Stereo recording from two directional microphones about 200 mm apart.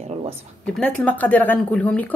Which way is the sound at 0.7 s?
5° left (ahead or behind).